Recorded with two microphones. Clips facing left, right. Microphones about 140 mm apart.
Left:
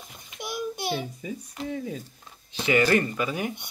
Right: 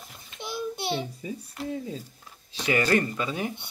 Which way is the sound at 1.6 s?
Centre (ahead or behind).